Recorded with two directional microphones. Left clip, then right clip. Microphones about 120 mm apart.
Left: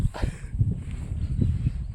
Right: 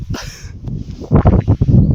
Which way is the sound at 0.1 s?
30° right (ahead or behind).